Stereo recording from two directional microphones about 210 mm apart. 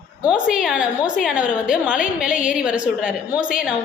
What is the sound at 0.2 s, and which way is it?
A woman's voice, 5° right (ahead or behind).